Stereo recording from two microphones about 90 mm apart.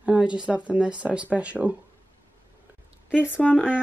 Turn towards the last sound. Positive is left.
turn(degrees=20)  # may be behind; listen again after turning